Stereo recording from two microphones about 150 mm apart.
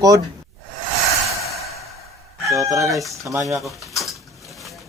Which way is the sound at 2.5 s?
20° right (ahead or behind).